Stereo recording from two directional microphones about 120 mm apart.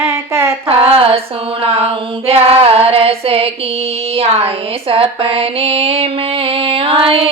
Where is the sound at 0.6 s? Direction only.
55° right (ahead or behind).